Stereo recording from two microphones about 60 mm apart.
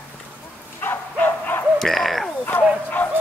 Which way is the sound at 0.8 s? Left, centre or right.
Left.